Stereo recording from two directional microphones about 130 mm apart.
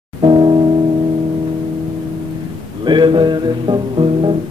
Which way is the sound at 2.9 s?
35° right (ahead or behind).